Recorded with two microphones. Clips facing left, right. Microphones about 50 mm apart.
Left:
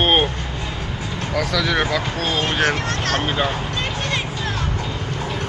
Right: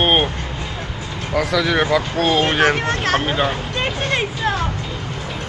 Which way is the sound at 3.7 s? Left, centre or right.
Right.